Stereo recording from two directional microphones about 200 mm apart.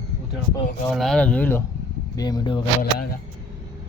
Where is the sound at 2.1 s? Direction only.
20° left (ahead or behind).